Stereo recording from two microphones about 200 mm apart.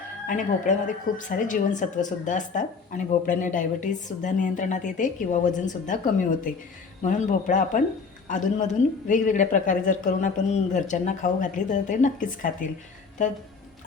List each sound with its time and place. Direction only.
0.3 s speech: 40° left (ahead or behind)